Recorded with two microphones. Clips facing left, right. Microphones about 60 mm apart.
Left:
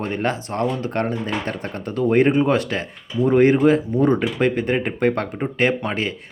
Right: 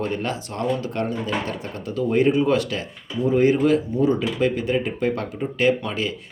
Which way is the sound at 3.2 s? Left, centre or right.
Left.